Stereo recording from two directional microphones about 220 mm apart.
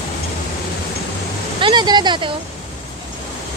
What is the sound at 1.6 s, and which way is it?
Speech, 20° right (ahead or behind).